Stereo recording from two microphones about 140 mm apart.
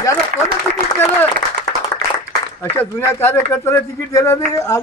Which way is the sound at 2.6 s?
15° left (ahead or behind).